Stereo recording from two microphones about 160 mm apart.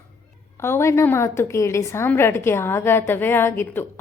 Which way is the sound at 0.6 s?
15° left (ahead or behind).